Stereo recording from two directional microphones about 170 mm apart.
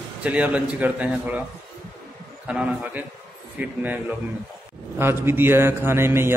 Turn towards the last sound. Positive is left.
turn(degrees=-15)  # may be behind; listen again after turning